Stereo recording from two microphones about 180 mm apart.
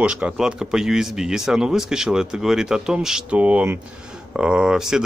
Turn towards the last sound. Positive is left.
turn(degrees=-5)  # may be behind; listen again after turning